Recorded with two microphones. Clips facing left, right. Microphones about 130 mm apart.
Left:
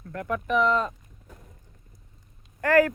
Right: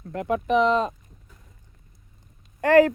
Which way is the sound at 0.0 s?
20° right (ahead or behind).